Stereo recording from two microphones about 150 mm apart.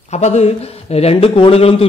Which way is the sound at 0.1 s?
45° left (ahead or behind).